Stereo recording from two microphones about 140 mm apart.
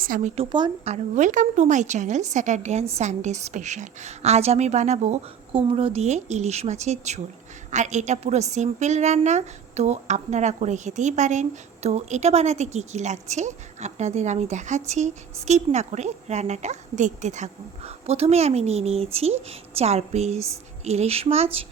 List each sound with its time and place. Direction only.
0.3 s speech: 35° right (ahead or behind)
0.9 s a woman's voice: 60° right (ahead or behind)
5.5 s a woman's voice: 40° right (ahead or behind)